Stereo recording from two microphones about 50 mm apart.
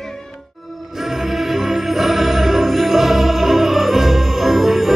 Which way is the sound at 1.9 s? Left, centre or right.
Centre.